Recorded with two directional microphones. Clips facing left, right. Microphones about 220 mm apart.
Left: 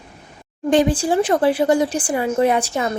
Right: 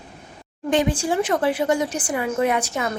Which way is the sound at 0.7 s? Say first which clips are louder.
Left 4 dB; 35° left (ahead or behind).